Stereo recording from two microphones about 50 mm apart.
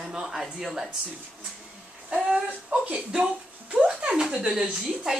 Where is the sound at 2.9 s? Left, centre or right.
Centre.